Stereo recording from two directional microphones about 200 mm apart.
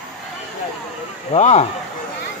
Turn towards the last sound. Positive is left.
turn(degrees=35)  # may be behind; listen again after turning